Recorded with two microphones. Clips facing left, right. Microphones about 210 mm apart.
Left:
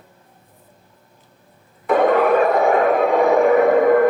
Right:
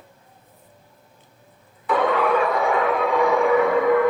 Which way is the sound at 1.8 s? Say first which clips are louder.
Left 5 dB; 50° left (ahead or behind).